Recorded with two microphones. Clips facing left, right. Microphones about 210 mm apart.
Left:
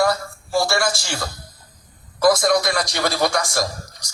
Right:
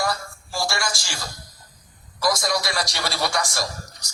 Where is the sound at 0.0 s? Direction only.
55° left (ahead or behind).